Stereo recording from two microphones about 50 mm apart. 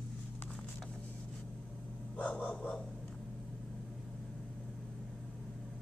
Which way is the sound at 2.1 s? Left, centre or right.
Left.